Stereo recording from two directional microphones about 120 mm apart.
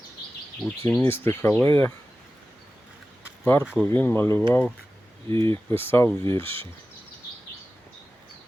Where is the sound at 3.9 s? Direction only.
15° left (ahead or behind).